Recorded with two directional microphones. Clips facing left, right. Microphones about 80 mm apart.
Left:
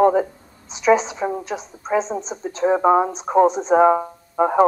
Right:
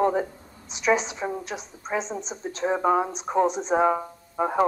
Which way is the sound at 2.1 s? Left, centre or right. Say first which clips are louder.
Left 6 dB; left.